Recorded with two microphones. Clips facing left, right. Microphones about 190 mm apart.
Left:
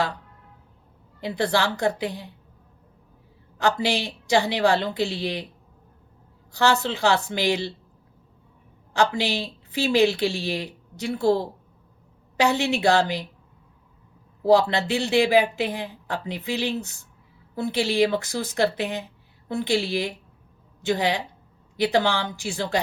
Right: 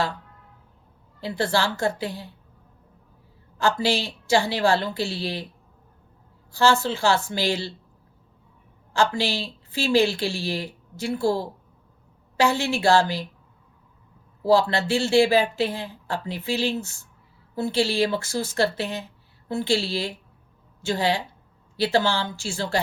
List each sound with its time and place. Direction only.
1.2 s a woman's voice: 20° left (ahead or behind)
3.6 s a woman's voice: 20° left (ahead or behind)
6.5 s a woman's voice: 20° left (ahead or behind)
8.9 s a woman's voice: 20° left (ahead or behind)
14.4 s speech: 20° left (ahead or behind)